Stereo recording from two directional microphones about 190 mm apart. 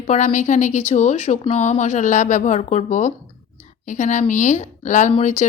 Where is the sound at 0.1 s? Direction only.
40° left (ahead or behind).